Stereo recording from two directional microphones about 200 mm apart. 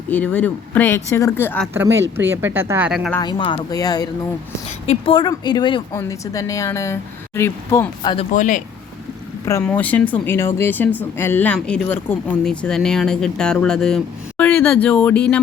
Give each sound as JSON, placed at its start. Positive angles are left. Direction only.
{"t": 0.1, "sound": "a woman's voice", "side_deg": 10}
{"t": 1.6, "sound": "speech", "side_deg": -10}
{"t": 3.2, "sound": "a woman's voice", "side_deg": 20}
{"t": 8.3, "sound": "speech", "side_deg": 40}
{"t": 9.5, "sound": "a woman's voice", "side_deg": 10}